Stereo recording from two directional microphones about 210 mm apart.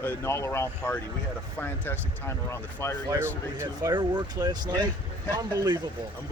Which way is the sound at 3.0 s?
10° right (ahead or behind).